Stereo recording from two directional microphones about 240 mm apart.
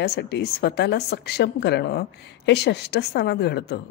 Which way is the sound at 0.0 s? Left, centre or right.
Left.